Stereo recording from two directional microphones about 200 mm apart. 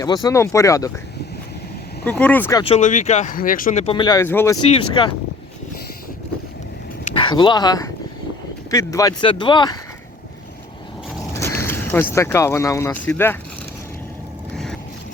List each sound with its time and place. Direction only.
0.0 s speech: 20° left (ahead or behind)
2.0 s speech: 5° left (ahead or behind)
2.6 s speech: 30° left (ahead or behind); by 4.5 s 10° left (ahead or behind)
4.7 s speech: 25° left (ahead or behind)
7.1 s speech: 25° left (ahead or behind)
11.3 s mechanisms: 10° left (ahead or behind)
12.1 s speech: 15° left (ahead or behind)
14.5 s boat: centre (ahead or behind)